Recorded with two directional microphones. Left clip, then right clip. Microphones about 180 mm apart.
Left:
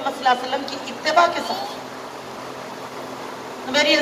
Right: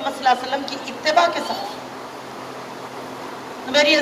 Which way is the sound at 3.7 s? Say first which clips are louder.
Right 2 dB; 35° right (ahead or behind).